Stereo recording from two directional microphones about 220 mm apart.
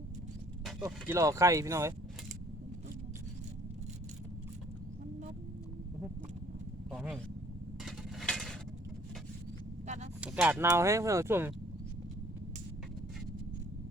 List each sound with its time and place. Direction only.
0.9 s speech: 10° right (ahead or behind)
6.9 s vehicle: 5° right (ahead or behind)
7.9 s a sound: centre (ahead or behind)
9.8 s vehicle: 30° right (ahead or behind)
10.2 s speech: 5° right (ahead or behind)